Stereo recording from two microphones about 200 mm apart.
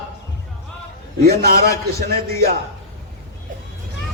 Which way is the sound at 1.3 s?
50° right (ahead or behind).